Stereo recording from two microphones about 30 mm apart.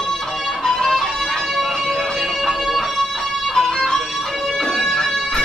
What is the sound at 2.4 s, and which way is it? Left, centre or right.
Music, centre.